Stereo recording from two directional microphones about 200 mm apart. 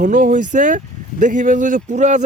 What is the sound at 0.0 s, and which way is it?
A man's voice, 40° right (ahead or behind).